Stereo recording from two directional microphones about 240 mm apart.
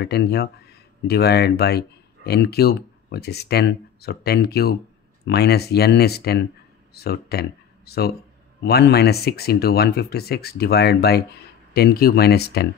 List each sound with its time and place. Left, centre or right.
0.0 s speech: left